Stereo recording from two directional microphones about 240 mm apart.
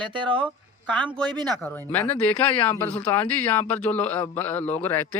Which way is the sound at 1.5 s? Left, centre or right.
Centre.